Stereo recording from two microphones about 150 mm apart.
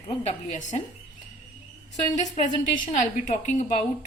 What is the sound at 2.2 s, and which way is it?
A woman's voice, 55° left (ahead or behind).